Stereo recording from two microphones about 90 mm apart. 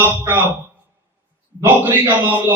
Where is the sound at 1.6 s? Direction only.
25° right (ahead or behind).